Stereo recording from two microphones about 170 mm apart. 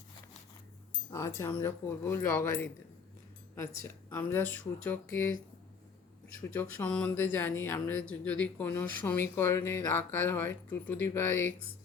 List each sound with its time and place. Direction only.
1.1 s speech: 15° left (ahead or behind)
3.8 s speech: 15° left (ahead or behind)
6.5 s speech: 10° left (ahead or behind)